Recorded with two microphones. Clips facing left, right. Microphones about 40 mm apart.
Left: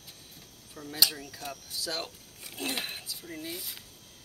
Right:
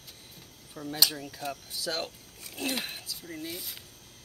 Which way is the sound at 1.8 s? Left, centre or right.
Right.